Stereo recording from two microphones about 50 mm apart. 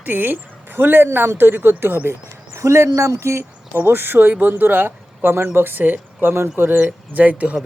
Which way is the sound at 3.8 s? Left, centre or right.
Right.